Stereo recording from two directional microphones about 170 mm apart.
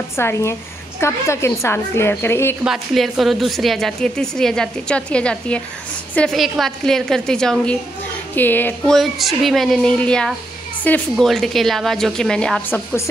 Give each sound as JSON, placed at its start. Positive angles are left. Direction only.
{"t": 0.1, "sound": "a woman's voice", "side_deg": 15}
{"t": 2.6, "sound": "a woman's voice", "side_deg": 0}